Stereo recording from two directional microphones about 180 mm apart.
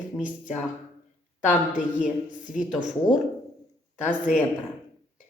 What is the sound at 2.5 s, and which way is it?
Speech, 45° left (ahead or behind).